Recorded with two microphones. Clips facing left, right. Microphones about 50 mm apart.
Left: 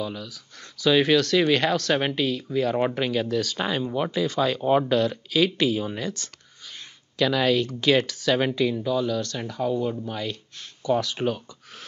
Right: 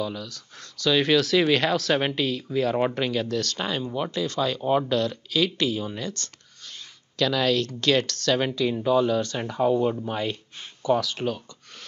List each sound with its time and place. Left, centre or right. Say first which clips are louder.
0.0 s speech: right 1 dB; centre
8.6 s speech: right 3 dB; centre
11.1 s speech: left 2 dB; centre